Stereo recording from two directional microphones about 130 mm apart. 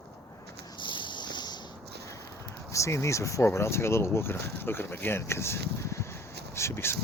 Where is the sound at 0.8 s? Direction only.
40° left (ahead or behind).